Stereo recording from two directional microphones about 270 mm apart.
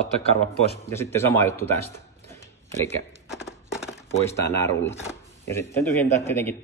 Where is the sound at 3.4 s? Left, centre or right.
Centre.